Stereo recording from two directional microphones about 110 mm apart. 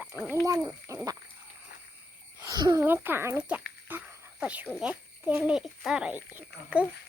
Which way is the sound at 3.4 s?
15° right (ahead or behind).